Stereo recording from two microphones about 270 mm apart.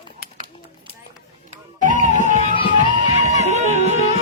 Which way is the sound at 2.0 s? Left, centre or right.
Left.